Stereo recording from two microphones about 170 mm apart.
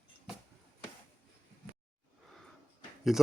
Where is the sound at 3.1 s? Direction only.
Centre (ahead or behind).